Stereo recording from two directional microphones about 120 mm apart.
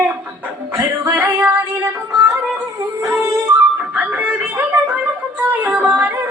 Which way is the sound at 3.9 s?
10° right (ahead or behind).